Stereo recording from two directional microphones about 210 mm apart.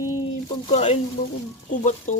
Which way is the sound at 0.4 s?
30° left (ahead or behind).